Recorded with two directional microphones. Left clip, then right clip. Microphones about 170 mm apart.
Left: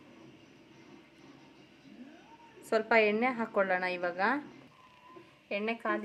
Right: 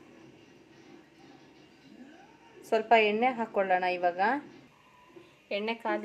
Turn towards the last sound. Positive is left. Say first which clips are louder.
# right 1 dB
turn(degrees=5)  # may be behind; listen again after turning